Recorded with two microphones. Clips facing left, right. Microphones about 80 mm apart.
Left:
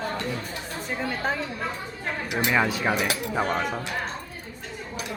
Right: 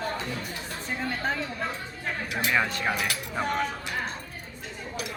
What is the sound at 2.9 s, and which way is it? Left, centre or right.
Speech, centre.